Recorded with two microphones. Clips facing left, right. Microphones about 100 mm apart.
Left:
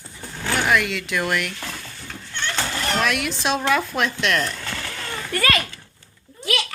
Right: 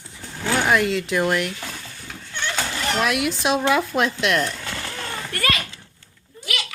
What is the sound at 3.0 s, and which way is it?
Speech, 20° right (ahead or behind).